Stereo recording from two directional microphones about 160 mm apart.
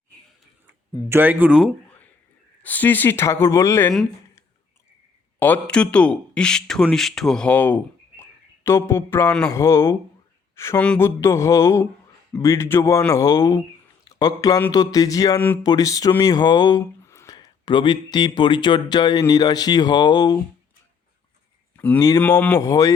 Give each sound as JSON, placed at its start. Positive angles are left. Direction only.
{"t": 1.1, "sound": "speech", "side_deg": -10}
{"t": 2.6, "sound": "speech", "side_deg": 10}
{"t": 5.4, "sound": "speech", "side_deg": 10}
{"t": 15.4, "sound": "speech", "side_deg": 10}
{"t": 15.6, "sound": "speech", "side_deg": 25}
{"t": 21.8, "sound": "speech", "side_deg": 15}